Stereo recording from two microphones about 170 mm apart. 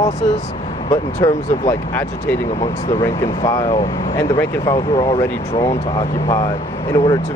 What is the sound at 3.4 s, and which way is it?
Speech, 30° left (ahead or behind).